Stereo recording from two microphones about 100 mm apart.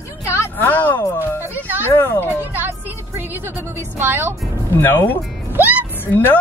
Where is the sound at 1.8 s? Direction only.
20° left (ahead or behind).